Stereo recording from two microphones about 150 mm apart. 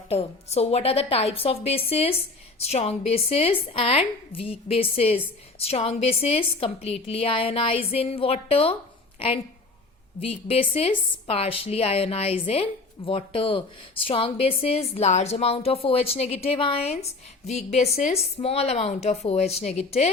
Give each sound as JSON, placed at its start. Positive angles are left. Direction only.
{"t": 0.1, "sound": "a woman's voice", "side_deg": 45}